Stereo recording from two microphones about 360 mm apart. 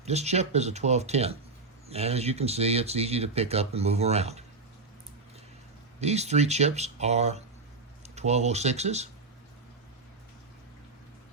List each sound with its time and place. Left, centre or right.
0.0 s speech: centre
6.0 s speech: centre